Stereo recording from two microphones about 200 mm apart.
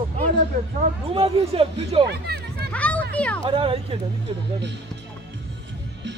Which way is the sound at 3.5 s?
25° right (ahead or behind).